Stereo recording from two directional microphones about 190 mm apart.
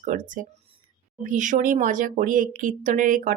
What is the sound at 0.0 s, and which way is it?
Speech, 45° right (ahead or behind).